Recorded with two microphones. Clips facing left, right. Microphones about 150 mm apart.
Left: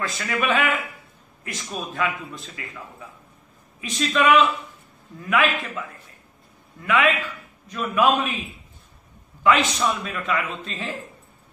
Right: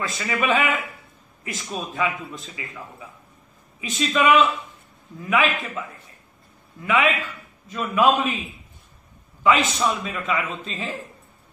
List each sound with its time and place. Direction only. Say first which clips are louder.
0.2 s a man's voice: right 1 dB; 5° right (ahead or behind)
9.4 s a man's voice: even; centre (ahead or behind)